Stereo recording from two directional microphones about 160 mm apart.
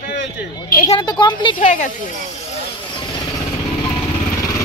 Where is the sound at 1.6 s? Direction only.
50° left (ahead or behind).